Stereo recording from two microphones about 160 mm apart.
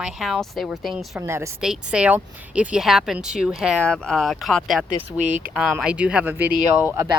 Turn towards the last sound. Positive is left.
turn(degrees=-15)  # may be behind; listen again after turning